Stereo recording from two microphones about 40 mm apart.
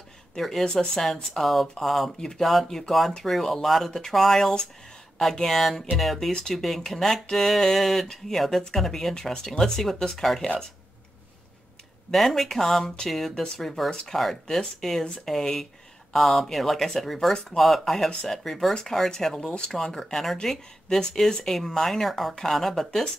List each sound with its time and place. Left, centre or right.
0.4 s speech: centre
12.1 s speech: centre
19.9 s speech: centre